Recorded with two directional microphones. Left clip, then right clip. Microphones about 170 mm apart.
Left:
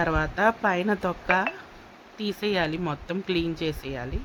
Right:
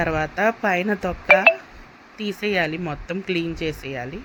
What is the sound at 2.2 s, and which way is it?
Speech, 10° right (ahead or behind).